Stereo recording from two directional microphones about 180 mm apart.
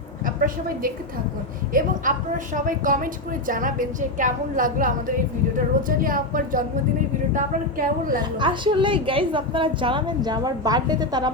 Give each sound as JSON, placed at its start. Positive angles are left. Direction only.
{"t": 0.3, "sound": "a woman's voice", "side_deg": -50}
{"t": 8.4, "sound": "a woman's voice", "side_deg": -25}